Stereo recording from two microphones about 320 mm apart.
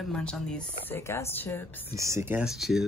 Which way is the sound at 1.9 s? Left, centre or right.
Centre.